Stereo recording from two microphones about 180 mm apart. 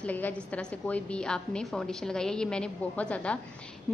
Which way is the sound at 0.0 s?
10° left (ahead or behind).